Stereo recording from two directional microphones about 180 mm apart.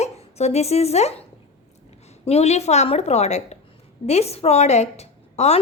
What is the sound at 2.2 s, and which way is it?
A woman's voice, 35° left (ahead or behind).